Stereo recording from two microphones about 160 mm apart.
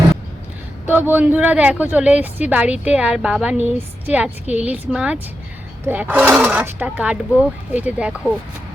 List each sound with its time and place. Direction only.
0.9 s speech: 10° right (ahead or behind)